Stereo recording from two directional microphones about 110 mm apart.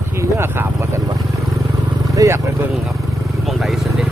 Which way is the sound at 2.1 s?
25° right (ahead or behind).